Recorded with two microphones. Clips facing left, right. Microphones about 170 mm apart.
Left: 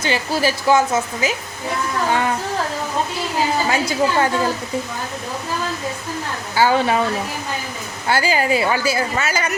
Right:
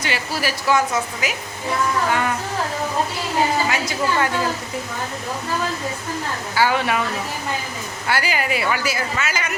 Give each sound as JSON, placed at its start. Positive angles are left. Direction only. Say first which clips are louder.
{"t": 0.0, "sound": "a woman's voice", "louder": "left 5 dB", "side_deg": 30}
{"t": 3.7, "sound": "a woman's voice", "louder": "left 3 dB", "side_deg": 30}
{"t": 6.6, "sound": "a woman's voice", "louder": "left 3 dB", "side_deg": 30}
{"t": 8.0, "sound": "a woman's voice", "louder": "left 4 dB", "side_deg": 30}